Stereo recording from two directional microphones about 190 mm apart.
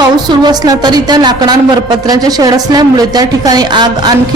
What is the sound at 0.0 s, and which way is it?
A woman's voice, 20° right (ahead or behind).